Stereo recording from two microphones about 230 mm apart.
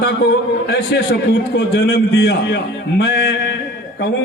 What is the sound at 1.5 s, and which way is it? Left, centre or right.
A man's voice, left.